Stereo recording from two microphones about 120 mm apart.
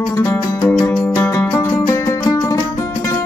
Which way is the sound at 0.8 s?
35° left (ahead or behind).